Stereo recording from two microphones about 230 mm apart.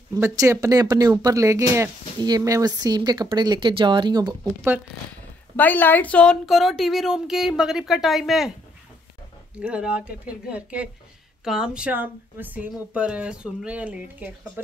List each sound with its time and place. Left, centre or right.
0.1 s speech: centre
5.6 s speech: centre
9.6 s speech: centre